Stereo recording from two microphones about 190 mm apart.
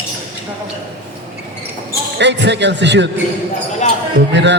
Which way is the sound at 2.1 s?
65° right (ahead or behind).